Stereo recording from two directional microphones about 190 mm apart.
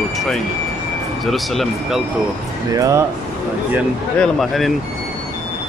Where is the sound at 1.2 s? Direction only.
Centre (ahead or behind).